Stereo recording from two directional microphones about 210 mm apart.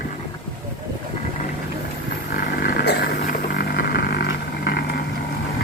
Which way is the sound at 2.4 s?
45° left (ahead or behind).